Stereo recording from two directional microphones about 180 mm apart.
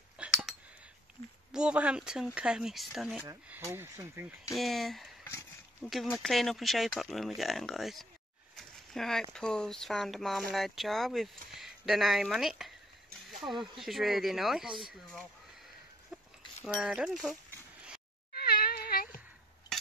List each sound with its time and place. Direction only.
0.2 s a sound: 5° right (ahead or behind)
1.5 s speech: 5° right (ahead or behind)
4.6 s speech: centre (ahead or behind)
5.2 s a sound: 15° left (ahead or behind)
5.9 s speech: centre (ahead or behind)
16.6 s speech: 5° right (ahead or behind)
18.3 s cat: 60° left (ahead or behind)